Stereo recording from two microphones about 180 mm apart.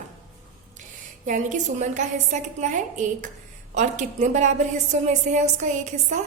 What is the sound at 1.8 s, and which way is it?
A woman's voice, 45° right (ahead or behind).